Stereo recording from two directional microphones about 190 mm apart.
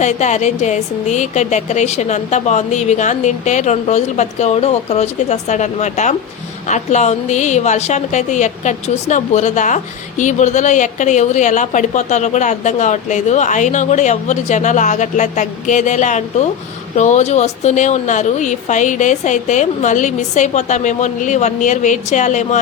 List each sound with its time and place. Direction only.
0.0 s a woman's voice: 40° left (ahead or behind)